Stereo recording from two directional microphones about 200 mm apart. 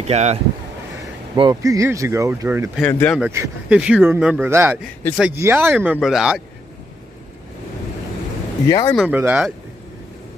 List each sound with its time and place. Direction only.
0.0 s speech: 35° right (ahead or behind)
1.3 s speech: 20° right (ahead or behind)
2.9 s speech: 10° left (ahead or behind)
3.2 s speech: 10° right (ahead or behind)
8.6 s speech: 15° left (ahead or behind)
8.9 s speech: 5° right (ahead or behind)